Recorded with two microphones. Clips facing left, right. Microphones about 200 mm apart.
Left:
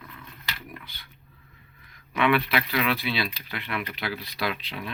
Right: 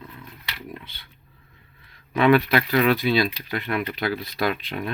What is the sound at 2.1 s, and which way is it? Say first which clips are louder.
Speech: right 6 dB; 40° right (ahead or behind).